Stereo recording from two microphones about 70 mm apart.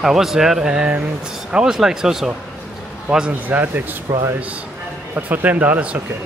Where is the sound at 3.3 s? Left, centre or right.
Right.